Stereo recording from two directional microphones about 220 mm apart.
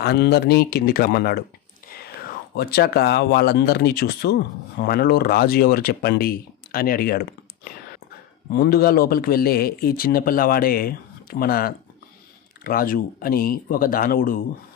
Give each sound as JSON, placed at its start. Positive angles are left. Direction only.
{"t": 0.0, "sound": "speech", "side_deg": 50}